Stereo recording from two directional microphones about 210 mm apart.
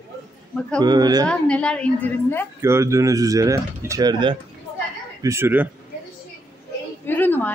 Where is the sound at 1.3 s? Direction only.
5° left (ahead or behind).